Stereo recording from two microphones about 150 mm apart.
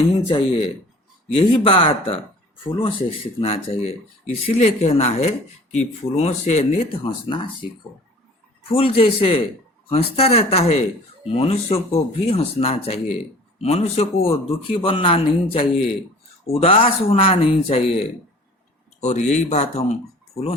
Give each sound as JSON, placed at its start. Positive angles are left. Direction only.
{"t": 0.2, "sound": "speech", "side_deg": 40}
{"t": 8.7, "sound": "speech", "side_deg": 40}